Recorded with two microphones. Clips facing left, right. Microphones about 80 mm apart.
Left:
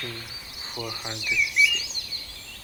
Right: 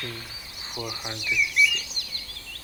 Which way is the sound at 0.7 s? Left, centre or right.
Centre.